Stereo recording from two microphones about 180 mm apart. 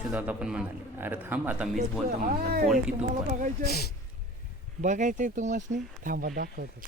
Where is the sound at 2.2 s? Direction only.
55° right (ahead or behind).